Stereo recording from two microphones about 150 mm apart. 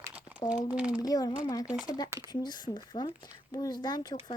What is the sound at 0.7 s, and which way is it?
Speech, 5° right (ahead or behind).